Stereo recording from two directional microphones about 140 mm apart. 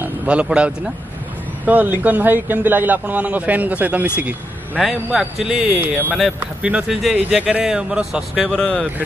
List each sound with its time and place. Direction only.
0.0 s a man's voice: 10° right (ahead or behind); by 8.8 s 5° left (ahead or behind)